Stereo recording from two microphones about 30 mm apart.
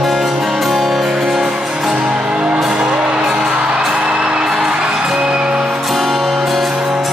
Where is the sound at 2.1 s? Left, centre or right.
Right.